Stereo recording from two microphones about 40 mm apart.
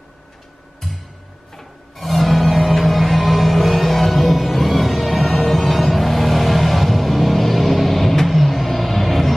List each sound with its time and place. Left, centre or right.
1.6 s music: centre